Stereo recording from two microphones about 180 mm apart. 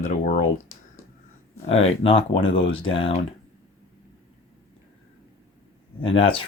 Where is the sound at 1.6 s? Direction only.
35° left (ahead or behind).